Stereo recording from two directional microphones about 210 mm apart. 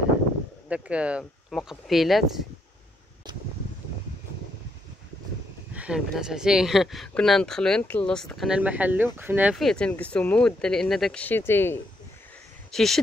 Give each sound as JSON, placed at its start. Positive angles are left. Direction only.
{"t": 0.7, "sound": "speech", "side_deg": -5}
{"t": 5.8, "sound": "speech", "side_deg": -5}